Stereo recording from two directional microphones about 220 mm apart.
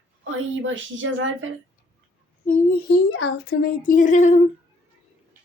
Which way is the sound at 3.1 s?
50° left (ahead or behind).